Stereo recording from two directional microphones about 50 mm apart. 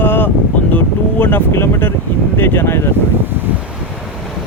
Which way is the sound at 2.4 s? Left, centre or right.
Left.